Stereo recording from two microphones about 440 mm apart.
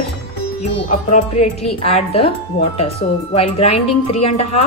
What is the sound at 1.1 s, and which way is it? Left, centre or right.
Speech, centre.